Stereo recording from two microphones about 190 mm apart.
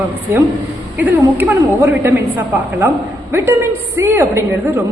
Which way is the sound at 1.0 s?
10° right (ahead or behind).